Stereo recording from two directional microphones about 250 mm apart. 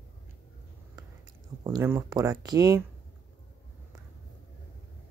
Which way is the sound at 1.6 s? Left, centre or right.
Centre.